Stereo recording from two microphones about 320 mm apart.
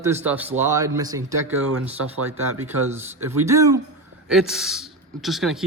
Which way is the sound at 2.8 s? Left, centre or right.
Centre.